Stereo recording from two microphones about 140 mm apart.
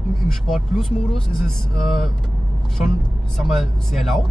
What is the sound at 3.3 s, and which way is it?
Speech, centre (ahead or behind).